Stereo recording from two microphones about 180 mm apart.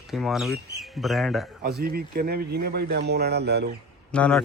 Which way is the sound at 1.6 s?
60° right (ahead or behind).